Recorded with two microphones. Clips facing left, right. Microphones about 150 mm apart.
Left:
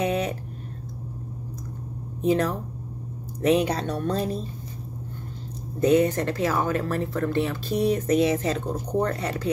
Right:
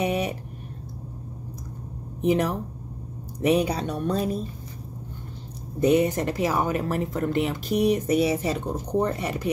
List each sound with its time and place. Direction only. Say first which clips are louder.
0.0 s a sound: even; 10° right (ahead or behind)
2.2 s speech: even; 15° right (ahead or behind)
5.8 s speech: left 1 dB; 15° right (ahead or behind)